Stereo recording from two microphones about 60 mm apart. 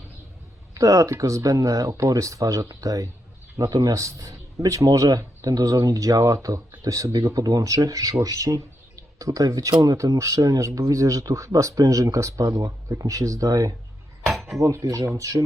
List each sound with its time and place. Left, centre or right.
0.7 s speech: right
14.3 s dishes: centre
14.6 s speech: right